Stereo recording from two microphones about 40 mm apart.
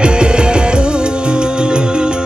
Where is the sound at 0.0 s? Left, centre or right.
Right.